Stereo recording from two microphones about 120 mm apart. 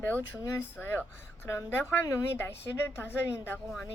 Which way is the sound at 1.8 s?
20° left (ahead or behind).